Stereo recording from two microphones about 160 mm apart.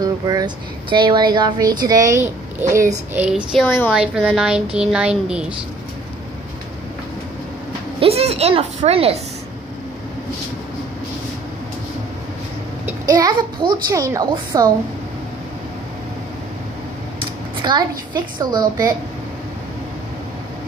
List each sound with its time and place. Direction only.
0.0 s a woman's voice: 25° right (ahead or behind)
3.2 s a woman's voice: 5° right (ahead or behind)
3.6 s a woman's voice: 10° left (ahead or behind)
3.9 s a woman's voice: 5° right (ahead or behind)
8.0 s a woman's voice: 40° right (ahead or behind)
13.0 s a child's voice: 25° right (ahead or behind)
17.2 s a woman's voice: 30° right (ahead or behind)